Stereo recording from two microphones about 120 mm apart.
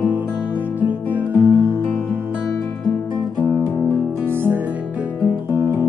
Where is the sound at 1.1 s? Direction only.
15° right (ahead or behind).